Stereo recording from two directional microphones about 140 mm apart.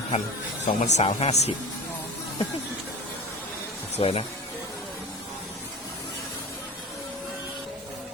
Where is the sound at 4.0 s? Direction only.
45° left (ahead or behind).